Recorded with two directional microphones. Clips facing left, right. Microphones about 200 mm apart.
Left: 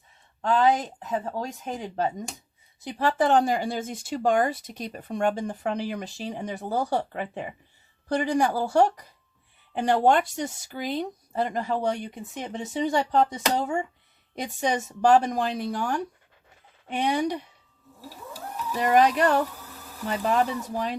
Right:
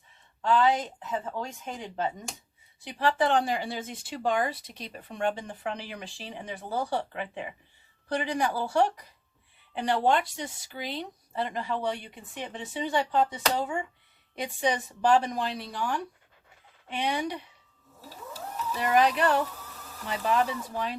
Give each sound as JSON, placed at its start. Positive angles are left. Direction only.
{"t": 0.4, "sound": "speech", "side_deg": 40}
{"t": 18.8, "sound": "speech", "side_deg": 45}